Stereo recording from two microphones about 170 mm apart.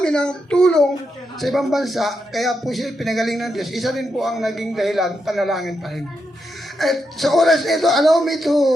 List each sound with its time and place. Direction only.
0.0 s a man's voice: 5° left (ahead or behind)